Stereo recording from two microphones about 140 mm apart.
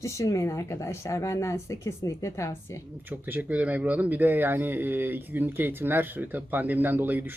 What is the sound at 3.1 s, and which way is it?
Speech, 10° right (ahead or behind).